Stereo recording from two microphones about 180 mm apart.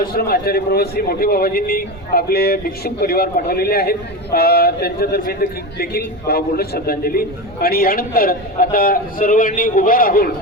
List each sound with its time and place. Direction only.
0.0 s a man's voice: 60° left (ahead or behind)